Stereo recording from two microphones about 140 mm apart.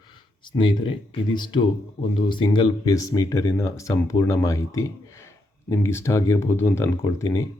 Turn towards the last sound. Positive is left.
turn(degrees=25)  # may be behind; listen again after turning